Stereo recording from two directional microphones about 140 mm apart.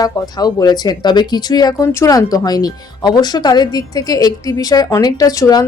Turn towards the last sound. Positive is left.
turn(degrees=25)  # may be behind; listen again after turning